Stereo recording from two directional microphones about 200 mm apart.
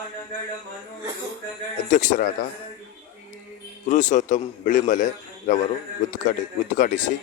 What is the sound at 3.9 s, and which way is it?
A man's voice, 40° left (ahead or behind).